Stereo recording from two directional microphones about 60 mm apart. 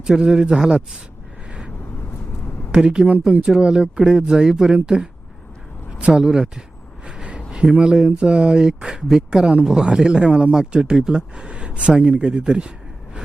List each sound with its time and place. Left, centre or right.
0.1 s speech: centre
2.7 s speech: centre
6.0 s speech: centre
7.1 s a sound: centre
7.5 s speech: centre